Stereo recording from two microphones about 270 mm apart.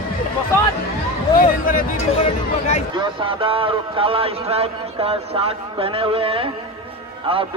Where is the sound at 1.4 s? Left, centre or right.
Left.